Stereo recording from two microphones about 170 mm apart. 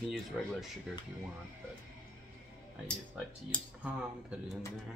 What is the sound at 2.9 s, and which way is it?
Speech, 5° left (ahead or behind).